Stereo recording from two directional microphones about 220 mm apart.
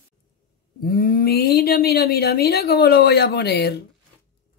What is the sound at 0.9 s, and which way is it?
Speech, 40° left (ahead or behind).